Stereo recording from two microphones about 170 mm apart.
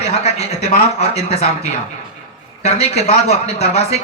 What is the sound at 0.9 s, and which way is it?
Speech, 40° left (ahead or behind).